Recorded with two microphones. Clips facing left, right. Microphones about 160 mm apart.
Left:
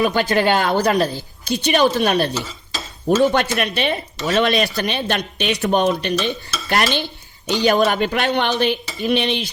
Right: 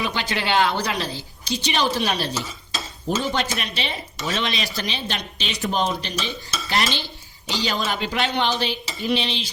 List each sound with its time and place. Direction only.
0.0 s a woman's voice: 45° left (ahead or behind)
3.3 s speech: 60° left (ahead or behind)